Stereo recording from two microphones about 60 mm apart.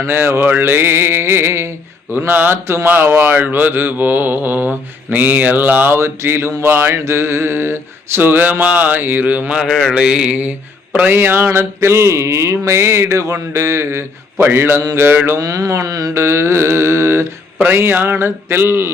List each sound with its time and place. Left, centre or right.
0.0 s mantra: right
2.1 s mantra: right
9.6 s mantra: centre
9.9 s mantra: centre
11.1 s mantra: right
15.4 s mantra: right
16.1 s mantra: right
17.7 s mantra: right